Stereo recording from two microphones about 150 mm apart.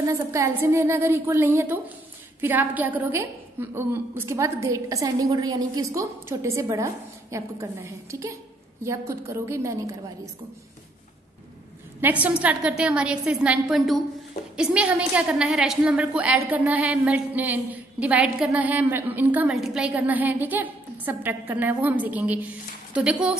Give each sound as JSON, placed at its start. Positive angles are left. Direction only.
{"t": 0.3, "sound": "a woman's voice", "side_deg": -20}
{"t": 12.0, "sound": "a woman's voice", "side_deg": -10}